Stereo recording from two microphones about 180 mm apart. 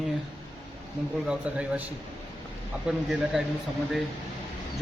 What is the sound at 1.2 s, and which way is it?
Speech, 5° right (ahead or behind).